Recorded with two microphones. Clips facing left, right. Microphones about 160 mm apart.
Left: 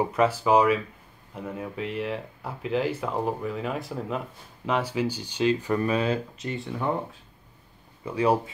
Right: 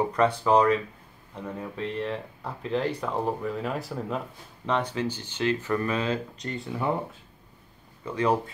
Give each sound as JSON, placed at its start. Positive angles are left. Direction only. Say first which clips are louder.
{"t": 0.0, "sound": "speech", "louder": "even", "side_deg": 5}
{"t": 8.0, "sound": "speech", "louder": "left 2 dB", "side_deg": 10}